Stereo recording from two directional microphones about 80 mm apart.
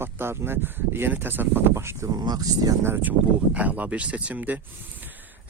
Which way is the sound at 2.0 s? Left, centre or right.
Right.